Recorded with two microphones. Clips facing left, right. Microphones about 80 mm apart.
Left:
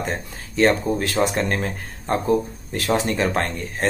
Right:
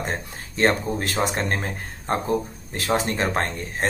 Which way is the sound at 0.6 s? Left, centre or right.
Right.